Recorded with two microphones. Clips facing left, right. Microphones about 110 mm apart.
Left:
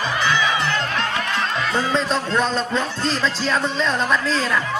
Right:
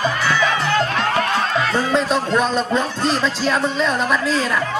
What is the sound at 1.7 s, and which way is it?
Speech, 10° right (ahead or behind).